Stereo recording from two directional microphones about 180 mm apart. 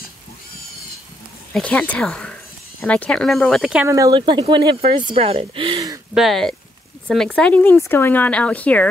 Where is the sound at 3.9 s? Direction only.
20° right (ahead or behind).